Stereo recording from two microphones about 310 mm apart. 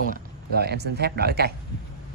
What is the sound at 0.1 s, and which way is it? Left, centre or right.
Speech, right.